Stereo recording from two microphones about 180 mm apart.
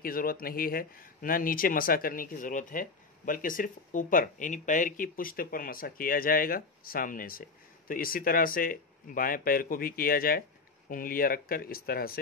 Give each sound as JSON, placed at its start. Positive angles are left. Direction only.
{"t": 0.0, "sound": "speech", "side_deg": 55}